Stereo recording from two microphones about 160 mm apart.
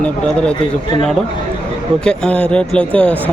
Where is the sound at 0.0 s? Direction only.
5° left (ahead or behind).